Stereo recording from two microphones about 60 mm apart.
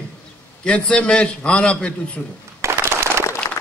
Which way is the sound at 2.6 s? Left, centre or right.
Right.